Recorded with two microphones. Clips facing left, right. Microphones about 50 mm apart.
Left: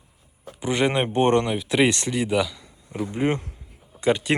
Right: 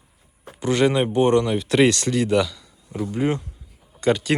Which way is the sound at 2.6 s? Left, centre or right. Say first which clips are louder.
Right 1 dB; left.